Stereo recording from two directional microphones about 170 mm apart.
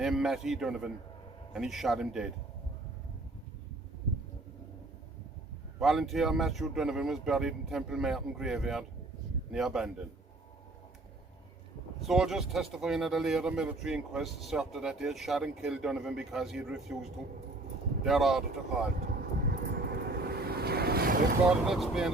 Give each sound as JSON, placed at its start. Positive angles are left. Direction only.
{"t": 0.0, "sound": "speech", "side_deg": 0}
{"t": 5.8, "sound": "speech", "side_deg": 0}
{"t": 11.9, "sound": "speech", "side_deg": 0}
{"t": 18.9, "sound": "vehicle", "side_deg": -65}
{"t": 21.7, "sound": "speech", "side_deg": 0}